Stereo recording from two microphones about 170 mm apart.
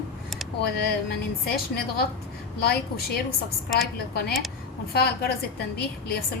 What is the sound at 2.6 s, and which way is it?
Speech, 65° left (ahead or behind).